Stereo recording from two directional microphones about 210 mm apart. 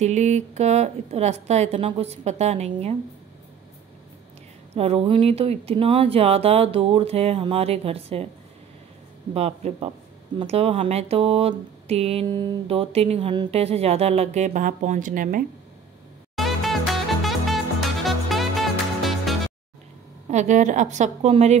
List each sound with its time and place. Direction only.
0.0 s a woman's voice: 35° right (ahead or behind)
4.7 s speech: 30° right (ahead or behind)
9.3 s a woman's voice: 30° right (ahead or behind)
16.3 s music: centre (ahead or behind)
20.2 s a woman's voice: 35° right (ahead or behind)